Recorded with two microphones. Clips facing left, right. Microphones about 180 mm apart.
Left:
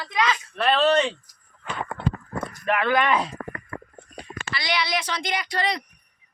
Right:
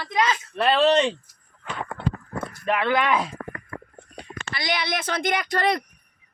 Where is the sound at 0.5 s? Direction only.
15° right (ahead or behind).